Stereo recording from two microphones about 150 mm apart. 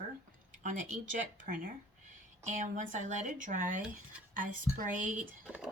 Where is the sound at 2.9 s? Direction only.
55° right (ahead or behind).